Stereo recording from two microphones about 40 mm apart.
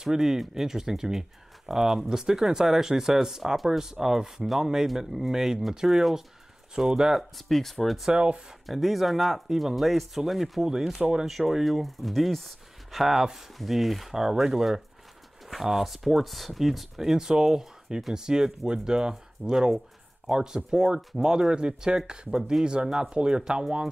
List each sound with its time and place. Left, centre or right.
0.0 s speech: centre
7.3 s speech: centre
8.1 s speech: right
8.6 s speech: centre
11.0 s speech: right
11.2 s speech: centre